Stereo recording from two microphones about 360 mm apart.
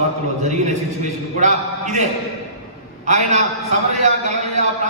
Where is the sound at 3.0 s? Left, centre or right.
Centre.